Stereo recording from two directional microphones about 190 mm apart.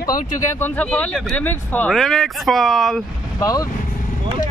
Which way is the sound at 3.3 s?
20° left (ahead or behind).